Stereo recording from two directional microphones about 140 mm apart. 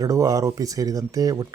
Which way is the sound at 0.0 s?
25° right (ahead or behind).